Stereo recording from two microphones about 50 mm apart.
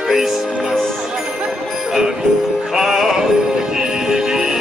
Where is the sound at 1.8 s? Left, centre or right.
Centre.